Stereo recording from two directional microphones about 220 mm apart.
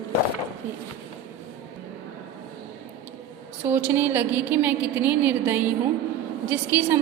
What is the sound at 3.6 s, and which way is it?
A woman's voice, 10° right (ahead or behind).